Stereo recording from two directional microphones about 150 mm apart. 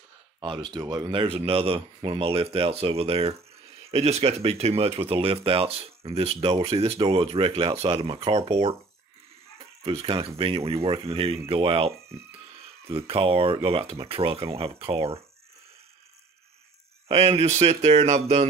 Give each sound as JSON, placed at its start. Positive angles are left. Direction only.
{"t": 0.7, "sound": "speech", "side_deg": -25}
{"t": 1.2, "sound": "speech", "side_deg": -40}
{"t": 9.8, "sound": "speech", "side_deg": -40}
{"t": 12.9, "sound": "speech", "side_deg": -40}
{"t": 17.1, "sound": "speech", "side_deg": -40}